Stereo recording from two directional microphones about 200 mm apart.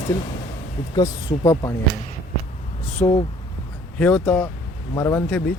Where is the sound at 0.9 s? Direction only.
15° left (ahead or behind).